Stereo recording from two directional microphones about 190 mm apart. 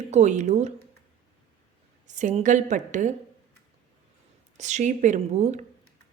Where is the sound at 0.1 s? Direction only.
40° right (ahead or behind).